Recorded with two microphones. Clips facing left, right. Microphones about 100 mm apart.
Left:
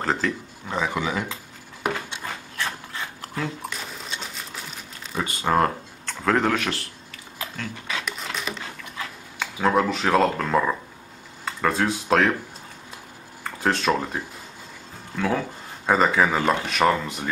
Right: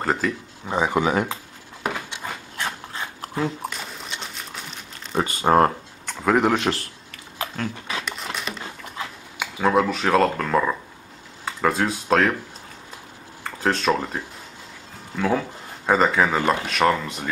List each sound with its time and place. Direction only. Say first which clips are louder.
0.0 s speech: right 1 dB; 5° right (ahead or behind)
0.7 s speech: right 4 dB; 20° right (ahead or behind)
1.0 s speech: right 5 dB; 50° right (ahead or behind)
1.9 s a sound: left 1 dB; 10° right (ahead or behind)
2.5 s a sound: even; 25° right (ahead or behind)
5.1 s speech: right 4 dB; 35° right (ahead or behind)
6.0 s speech: right 2 dB; 10° right (ahead or behind)
6.5 s speech: right 4 dB; 25° right (ahead or behind)
7.1 s a sound: right 7 dB; 45° right (ahead or behind)
8.0 s a sound: even; centre (ahead or behind)
9.4 s speech: right 1 dB; 5° right (ahead or behind)
13.4 s speech: right 1 dB; centre (ahead or behind)